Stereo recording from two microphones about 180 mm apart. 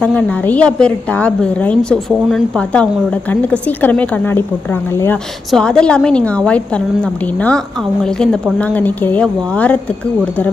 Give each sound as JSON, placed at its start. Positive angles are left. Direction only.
{"t": 0.0, "sound": "a woman's voice", "side_deg": 10}